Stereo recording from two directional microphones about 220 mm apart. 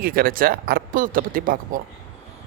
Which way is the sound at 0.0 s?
40° right (ahead or behind).